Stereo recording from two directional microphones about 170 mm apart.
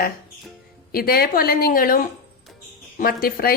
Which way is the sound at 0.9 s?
60° left (ahead or behind).